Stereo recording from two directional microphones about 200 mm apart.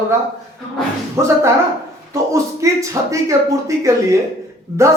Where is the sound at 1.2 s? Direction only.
15° right (ahead or behind).